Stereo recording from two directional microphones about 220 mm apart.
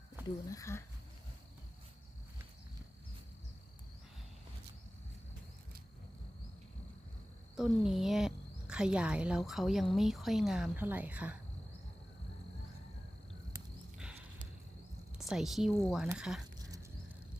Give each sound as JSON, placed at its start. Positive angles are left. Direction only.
{"t": 0.4, "sound": "speech", "side_deg": 15}
{"t": 7.5, "sound": "a woman's voice", "side_deg": 0}
{"t": 15.3, "sound": "a woman's voice", "side_deg": 0}